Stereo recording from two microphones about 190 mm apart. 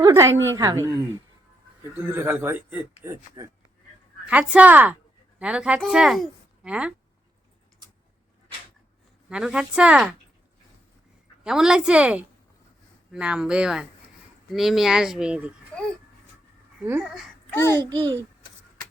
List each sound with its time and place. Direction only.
0.0 s a woman's voice: 15° right (ahead or behind)
2.0 s a woman's voice: 10° right (ahead or behind)
9.3 s speech: 5° right (ahead or behind)
11.4 s speech: 5° right (ahead or behind)
17.0 s speech: centre (ahead or behind)
17.5 s a child's voice: 15° left (ahead or behind)
17.8 s a woman's voice: 25° right (ahead or behind)